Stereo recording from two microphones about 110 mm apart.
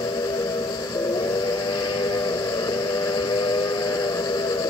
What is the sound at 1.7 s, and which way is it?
Steam whistle, 40° left (ahead or behind).